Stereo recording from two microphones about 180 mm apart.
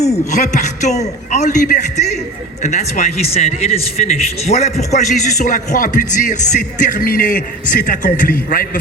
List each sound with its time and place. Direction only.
0.0 s a man's voice: 40° left (ahead or behind)